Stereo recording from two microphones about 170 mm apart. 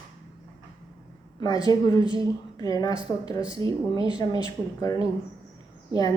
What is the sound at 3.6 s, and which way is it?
Speech, 25° right (ahead or behind).